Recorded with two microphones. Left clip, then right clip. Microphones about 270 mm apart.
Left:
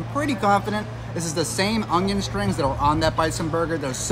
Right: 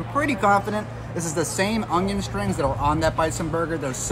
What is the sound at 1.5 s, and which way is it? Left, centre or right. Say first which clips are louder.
A man's voice: left 1 dB; centre.